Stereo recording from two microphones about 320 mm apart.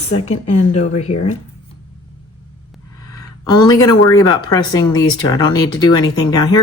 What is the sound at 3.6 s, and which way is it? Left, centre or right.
Speech, centre.